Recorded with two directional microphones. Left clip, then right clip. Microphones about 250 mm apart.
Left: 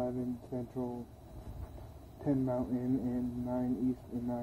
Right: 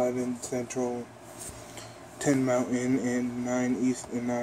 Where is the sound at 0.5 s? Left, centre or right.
Centre.